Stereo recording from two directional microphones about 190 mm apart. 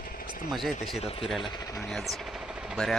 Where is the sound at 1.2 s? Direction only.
Centre (ahead or behind).